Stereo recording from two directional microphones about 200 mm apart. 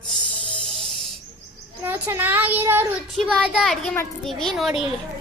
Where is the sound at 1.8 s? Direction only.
10° right (ahead or behind).